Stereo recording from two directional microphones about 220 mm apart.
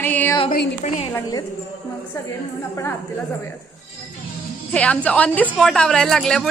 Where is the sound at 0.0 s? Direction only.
10° left (ahead or behind).